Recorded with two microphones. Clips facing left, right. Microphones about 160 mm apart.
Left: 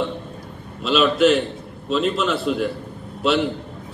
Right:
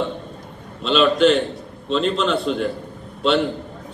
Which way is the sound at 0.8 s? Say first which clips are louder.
Right 1 dB; 5° left (ahead or behind).